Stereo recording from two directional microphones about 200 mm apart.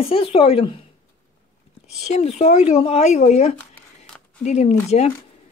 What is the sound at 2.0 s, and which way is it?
Speech, 30° left (ahead or behind).